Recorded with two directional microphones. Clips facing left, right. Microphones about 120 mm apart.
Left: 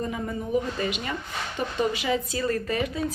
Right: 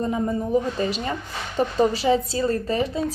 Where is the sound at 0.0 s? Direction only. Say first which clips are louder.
Right 6 dB; 30° right (ahead or behind).